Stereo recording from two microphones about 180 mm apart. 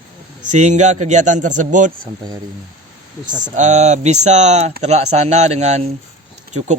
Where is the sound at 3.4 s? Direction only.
40° right (ahead or behind).